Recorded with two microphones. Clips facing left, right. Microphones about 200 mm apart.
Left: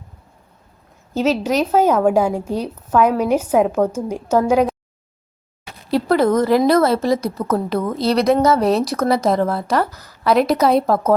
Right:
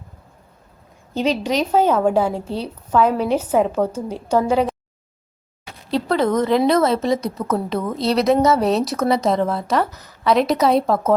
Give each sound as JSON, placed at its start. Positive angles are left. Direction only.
{"t": 1.1, "sound": "a woman's voice", "side_deg": 5}
{"t": 5.9, "sound": "a woman's voice", "side_deg": 5}